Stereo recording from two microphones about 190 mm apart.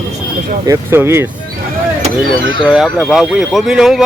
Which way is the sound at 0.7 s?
10° right (ahead or behind).